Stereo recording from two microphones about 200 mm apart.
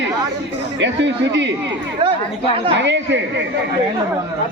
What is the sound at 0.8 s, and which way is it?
Speech, 65° right (ahead or behind).